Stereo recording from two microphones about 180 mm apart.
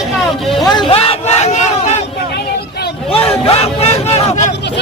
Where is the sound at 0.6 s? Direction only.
25° left (ahead or behind); by 2.0 s 40° left (ahead or behind).